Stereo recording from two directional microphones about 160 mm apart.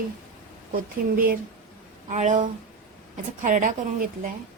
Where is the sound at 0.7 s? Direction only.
60° right (ahead or behind).